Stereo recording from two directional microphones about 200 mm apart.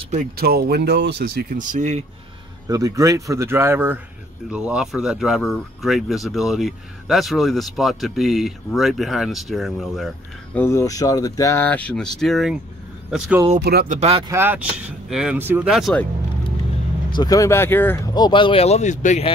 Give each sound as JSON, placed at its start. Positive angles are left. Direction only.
{"t": 0.0, "sound": "a sound", "side_deg": -35}
{"t": 0.4, "sound": "speech", "side_deg": -50}
{"t": 1.6, "sound": "speech", "side_deg": -40}
{"t": 2.7, "sound": "speech", "side_deg": -15}
{"t": 10.6, "sound": "speech", "side_deg": 15}
{"t": 13.6, "sound": "speech", "side_deg": -50}
{"t": 13.9, "sound": "speech", "side_deg": -30}
{"t": 14.3, "sound": "speech", "side_deg": -10}
{"t": 17.1, "sound": "speech", "side_deg": 20}
{"t": 18.1, "sound": "speech", "side_deg": 20}